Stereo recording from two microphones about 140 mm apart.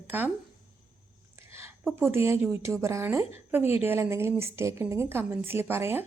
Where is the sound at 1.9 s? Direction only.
15° right (ahead or behind).